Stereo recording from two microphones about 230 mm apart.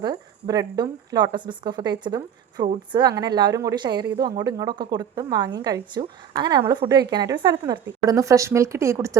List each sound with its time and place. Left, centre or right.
0.0 s a woman's voice: centre